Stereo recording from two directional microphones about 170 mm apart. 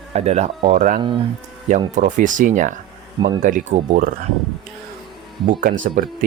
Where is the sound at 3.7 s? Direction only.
60° right (ahead or behind).